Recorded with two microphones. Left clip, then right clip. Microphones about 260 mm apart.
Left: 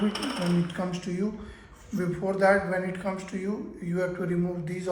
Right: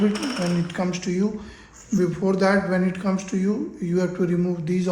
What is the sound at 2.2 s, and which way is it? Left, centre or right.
Speech, right.